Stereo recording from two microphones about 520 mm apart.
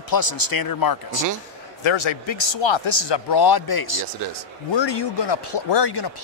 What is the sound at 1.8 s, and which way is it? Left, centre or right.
Speech, left.